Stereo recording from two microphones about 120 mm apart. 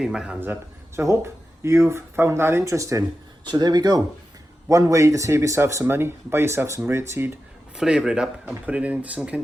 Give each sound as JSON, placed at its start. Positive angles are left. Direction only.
{"t": 0.0, "sound": "speech", "side_deg": -5}
{"t": 0.3, "sound": "speech", "side_deg": -15}
{"t": 3.4, "sound": "speech", "side_deg": -35}
{"t": 7.8, "sound": "speech", "side_deg": -5}